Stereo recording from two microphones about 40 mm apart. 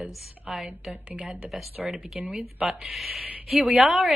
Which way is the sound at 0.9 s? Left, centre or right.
Right.